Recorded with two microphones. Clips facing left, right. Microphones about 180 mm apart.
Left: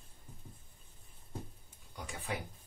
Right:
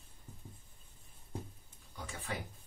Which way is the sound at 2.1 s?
15° left (ahead or behind).